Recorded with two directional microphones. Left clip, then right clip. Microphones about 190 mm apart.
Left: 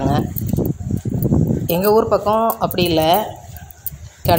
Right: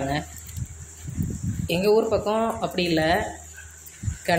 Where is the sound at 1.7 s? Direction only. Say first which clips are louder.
Left 5 dB; 30° left (ahead or behind).